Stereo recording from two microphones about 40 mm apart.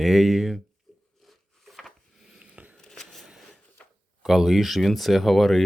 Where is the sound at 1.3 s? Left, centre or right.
Centre.